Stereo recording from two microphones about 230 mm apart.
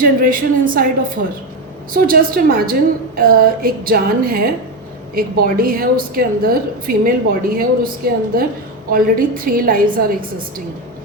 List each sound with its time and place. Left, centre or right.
0.0 s a woman's voice: right